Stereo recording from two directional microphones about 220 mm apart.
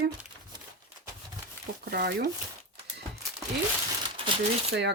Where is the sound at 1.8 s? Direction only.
45° right (ahead or behind).